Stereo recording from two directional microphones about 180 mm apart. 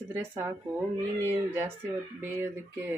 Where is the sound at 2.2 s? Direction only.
15° right (ahead or behind).